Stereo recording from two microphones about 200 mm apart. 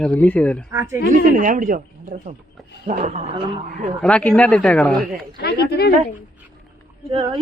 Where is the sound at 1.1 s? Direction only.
40° right (ahead or behind).